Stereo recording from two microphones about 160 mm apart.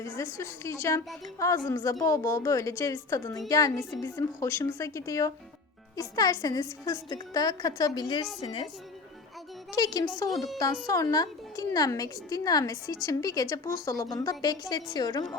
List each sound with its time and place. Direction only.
0.0 s a woman's voice: 20° left (ahead or behind)
9.7 s a woman's voice: 25° left (ahead or behind)